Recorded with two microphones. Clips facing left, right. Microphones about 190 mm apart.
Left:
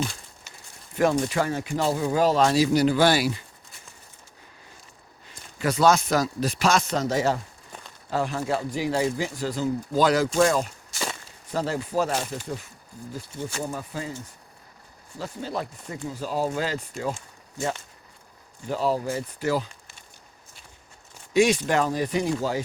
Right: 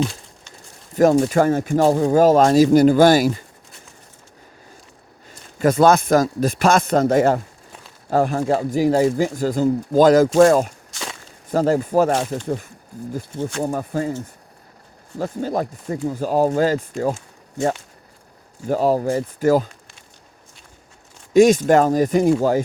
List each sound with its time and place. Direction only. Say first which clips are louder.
0.0 s a sound: right 7 dB; centre (ahead or behind)
0.9 s speech: right 8 dB; 45° right (ahead or behind)
5.5 s speech: right 6 dB; 50° right (ahead or behind)
10.9 s walk: left 1 dB; centre (ahead or behind)
11.5 s speech: right 9 dB; 45° right (ahead or behind)
15.2 s speech: right 8 dB; 50° right (ahead or behind)
18.7 s speech: right 7 dB; 45° right (ahead or behind)
21.3 s speech: right 8 dB; 45° right (ahead or behind)